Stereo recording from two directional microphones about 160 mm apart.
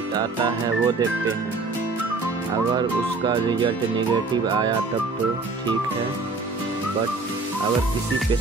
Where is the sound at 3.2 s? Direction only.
30° right (ahead or behind).